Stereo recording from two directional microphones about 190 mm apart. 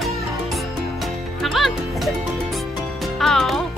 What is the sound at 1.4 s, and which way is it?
Speech, centre (ahead or behind).